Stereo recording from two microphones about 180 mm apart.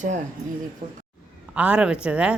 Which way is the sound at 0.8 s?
30° right (ahead or behind).